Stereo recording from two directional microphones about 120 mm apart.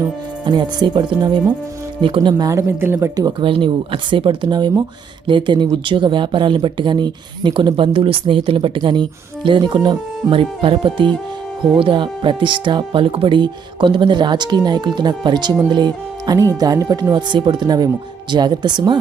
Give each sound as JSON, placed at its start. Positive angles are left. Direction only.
{"t": 0.4, "sound": "speech", "side_deg": -40}
{"t": 2.5, "sound": "speech", "side_deg": -25}
{"t": 3.4, "sound": "speech", "side_deg": -45}